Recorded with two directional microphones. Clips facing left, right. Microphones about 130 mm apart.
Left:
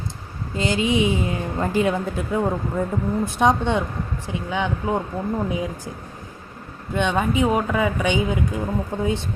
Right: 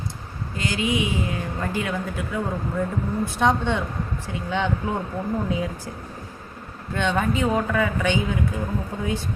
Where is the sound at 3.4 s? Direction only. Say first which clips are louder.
Left 2 dB; 15° left (ahead or behind).